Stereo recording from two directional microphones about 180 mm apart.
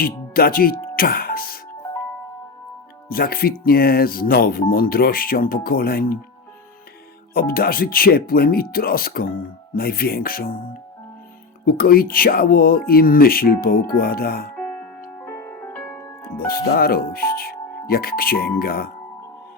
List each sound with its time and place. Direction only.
0.0 s speech: 55° left (ahead or behind)
0.9 s music: 55° left (ahead or behind)
3.1 s speech: 55° left (ahead or behind)
7.3 s speech: 55° left (ahead or behind)
11.6 s speech: 55° left (ahead or behind)
14.5 s music: 5° left (ahead or behind)
16.5 s speech: 55° left (ahead or behind)